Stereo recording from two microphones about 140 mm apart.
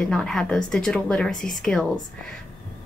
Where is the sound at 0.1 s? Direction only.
5° left (ahead or behind).